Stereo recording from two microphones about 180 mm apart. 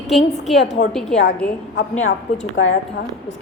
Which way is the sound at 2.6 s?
75° left (ahead or behind).